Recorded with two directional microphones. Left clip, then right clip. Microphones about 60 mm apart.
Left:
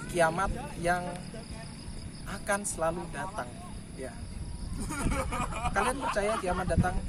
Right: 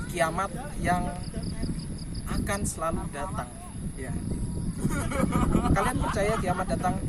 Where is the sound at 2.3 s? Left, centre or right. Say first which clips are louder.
Even; left.